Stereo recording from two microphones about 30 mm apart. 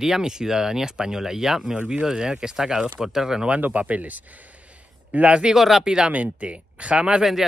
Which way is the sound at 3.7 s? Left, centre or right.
Right.